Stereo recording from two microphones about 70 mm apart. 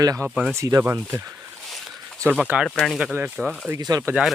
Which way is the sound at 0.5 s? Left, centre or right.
Right.